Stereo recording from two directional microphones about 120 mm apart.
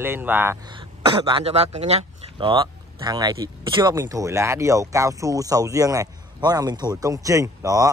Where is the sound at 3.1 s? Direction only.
30° right (ahead or behind).